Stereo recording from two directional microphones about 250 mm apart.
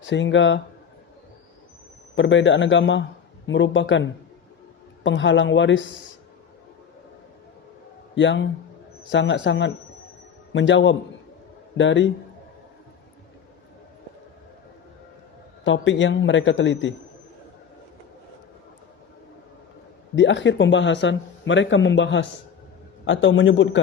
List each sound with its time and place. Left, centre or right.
0.0 s speech: left
2.1 s speech: left
8.1 s speech: left
15.6 s speech: left
20.1 s speech: left